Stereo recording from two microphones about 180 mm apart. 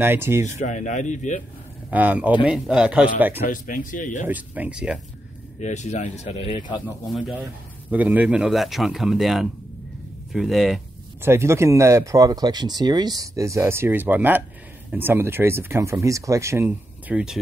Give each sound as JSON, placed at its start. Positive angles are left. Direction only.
{"t": 0.0, "sound": "speech", "side_deg": -15}
{"t": 0.6, "sound": "speech", "side_deg": 40}
{"t": 1.9, "sound": "speech", "side_deg": -10}
{"t": 3.4, "sound": "speech", "side_deg": 50}
{"t": 4.3, "sound": "speech", "side_deg": -10}
{"t": 5.6, "sound": "speech", "side_deg": 40}
{"t": 7.1, "sound": "speech", "side_deg": 0}
{"t": 11.2, "sound": "speech", "side_deg": -15}